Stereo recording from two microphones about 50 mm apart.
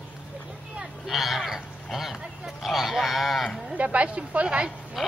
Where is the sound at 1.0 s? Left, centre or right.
Centre.